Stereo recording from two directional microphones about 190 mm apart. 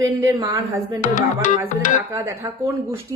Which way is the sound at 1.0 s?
40° left (ahead or behind).